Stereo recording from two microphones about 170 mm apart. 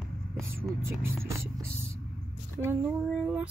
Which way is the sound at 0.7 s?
15° right (ahead or behind).